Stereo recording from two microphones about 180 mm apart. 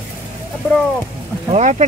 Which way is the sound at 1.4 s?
35° right (ahead or behind).